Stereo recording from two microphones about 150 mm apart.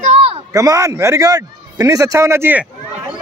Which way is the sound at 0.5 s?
20° right (ahead or behind).